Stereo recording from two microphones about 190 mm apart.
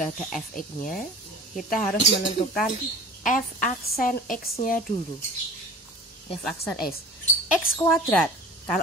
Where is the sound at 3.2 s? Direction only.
45° left (ahead or behind).